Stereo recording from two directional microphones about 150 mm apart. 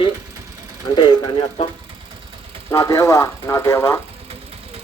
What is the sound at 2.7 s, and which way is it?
Speech, 20° left (ahead or behind).